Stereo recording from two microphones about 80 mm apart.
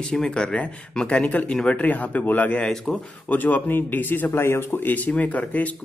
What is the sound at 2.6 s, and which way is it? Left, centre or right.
Speech, centre.